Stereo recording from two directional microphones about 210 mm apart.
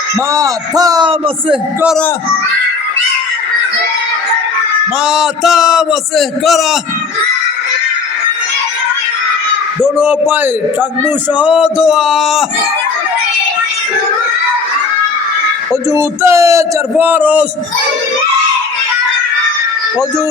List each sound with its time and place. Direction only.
0.3 s a man's voice: 15° right (ahead or behind)
5.0 s a man's voice: centre (ahead or behind)
9.8 s a man's voice: 10° right (ahead or behind)
15.7 s a man's voice: 15° right (ahead or behind)